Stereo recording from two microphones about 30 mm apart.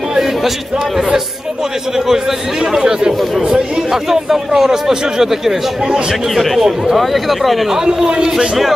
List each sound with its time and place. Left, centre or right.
2.8 s speech: right
3.5 s speech: centre
6.3 s speech: centre
7.7 s speech: centre